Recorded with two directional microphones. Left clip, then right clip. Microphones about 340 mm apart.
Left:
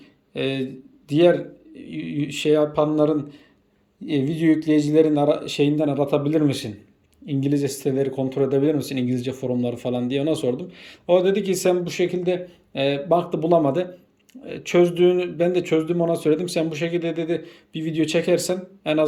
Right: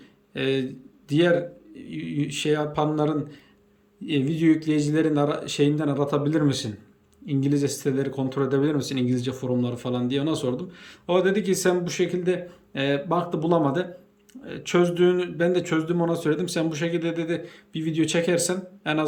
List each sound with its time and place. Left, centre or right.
0.3 s speech: centre